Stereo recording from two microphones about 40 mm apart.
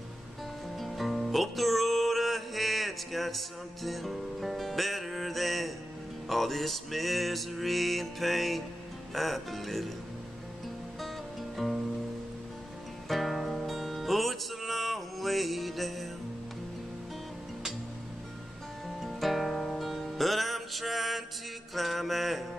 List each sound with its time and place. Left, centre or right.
0.7 s music: centre
11.5 s music: centre
13.1 s music: centre
18.9 s music: centre
21.7 s mantra: centre